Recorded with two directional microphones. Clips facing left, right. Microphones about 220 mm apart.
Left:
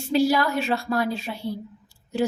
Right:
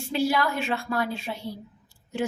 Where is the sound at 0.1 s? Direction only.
40° left (ahead or behind).